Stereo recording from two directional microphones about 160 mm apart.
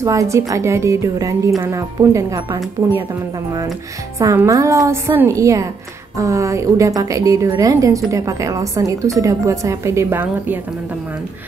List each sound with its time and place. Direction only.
0.0 s a woman's voice: 20° right (ahead or behind)
4.2 s a woman's voice: 20° right (ahead or behind)